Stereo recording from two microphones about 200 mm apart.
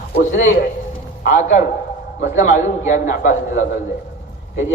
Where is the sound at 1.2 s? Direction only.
40° left (ahead or behind).